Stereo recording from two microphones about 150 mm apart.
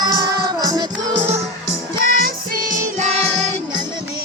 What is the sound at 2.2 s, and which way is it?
Music, 65° right (ahead or behind).